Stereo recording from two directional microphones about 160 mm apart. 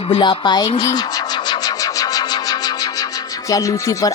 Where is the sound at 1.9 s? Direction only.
25° left (ahead or behind).